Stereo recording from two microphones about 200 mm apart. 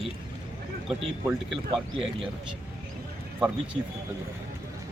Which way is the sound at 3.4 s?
5° right (ahead or behind).